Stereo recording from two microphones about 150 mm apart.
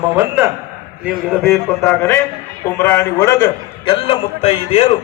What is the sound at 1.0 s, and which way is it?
Speech, centre (ahead or behind).